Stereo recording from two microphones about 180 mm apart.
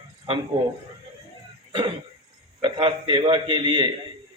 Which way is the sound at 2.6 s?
25° right (ahead or behind).